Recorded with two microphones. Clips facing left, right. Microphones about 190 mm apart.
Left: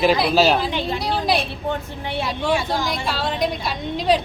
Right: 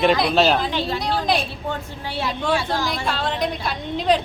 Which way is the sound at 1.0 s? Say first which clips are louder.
Left 1 dB; 10° left (ahead or behind).